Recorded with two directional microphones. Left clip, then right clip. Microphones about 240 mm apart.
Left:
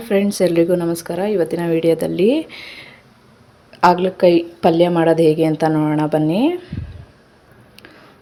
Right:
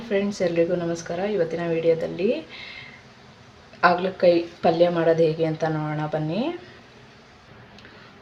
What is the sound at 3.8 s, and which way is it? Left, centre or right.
A woman's voice, left.